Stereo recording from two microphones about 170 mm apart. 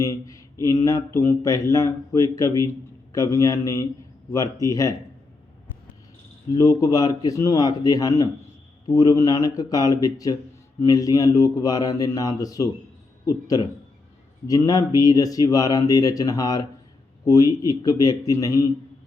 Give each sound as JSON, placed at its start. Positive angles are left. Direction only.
{"t": 0.0, "sound": "speech", "side_deg": 20}
{"t": 6.5, "sound": "speech", "side_deg": 20}